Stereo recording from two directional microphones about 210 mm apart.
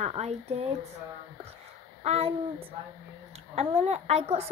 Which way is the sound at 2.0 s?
30° right (ahead or behind).